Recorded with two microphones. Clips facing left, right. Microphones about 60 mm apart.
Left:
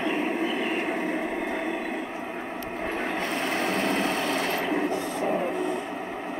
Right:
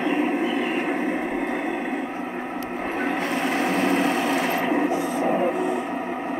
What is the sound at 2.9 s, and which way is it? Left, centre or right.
Sewing machine, centre.